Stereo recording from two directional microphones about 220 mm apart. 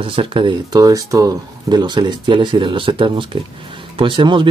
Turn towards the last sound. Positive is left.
turn(degrees=-20)  # may be behind; listen again after turning